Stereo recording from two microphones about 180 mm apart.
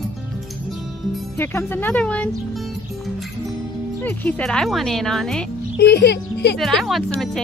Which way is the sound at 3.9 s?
10° left (ahead or behind).